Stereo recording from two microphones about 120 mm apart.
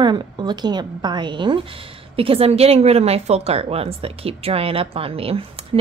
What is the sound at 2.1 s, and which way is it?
A woman's voice, 50° right (ahead or behind).